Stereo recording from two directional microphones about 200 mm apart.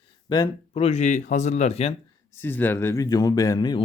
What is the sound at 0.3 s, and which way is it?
Speech, 20° left (ahead or behind).